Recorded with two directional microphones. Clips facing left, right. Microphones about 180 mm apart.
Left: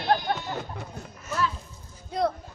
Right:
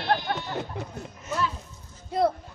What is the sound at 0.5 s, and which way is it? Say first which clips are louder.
Speech: right 3 dB; 20° right (ahead or behind).